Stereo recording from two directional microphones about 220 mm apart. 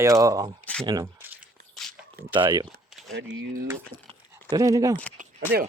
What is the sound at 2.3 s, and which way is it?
Speech, 20° right (ahead or behind).